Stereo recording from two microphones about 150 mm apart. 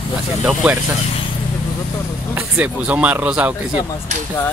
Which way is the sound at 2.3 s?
10° right (ahead or behind).